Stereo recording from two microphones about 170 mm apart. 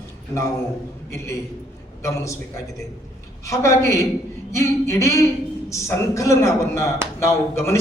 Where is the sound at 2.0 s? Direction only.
20° left (ahead or behind).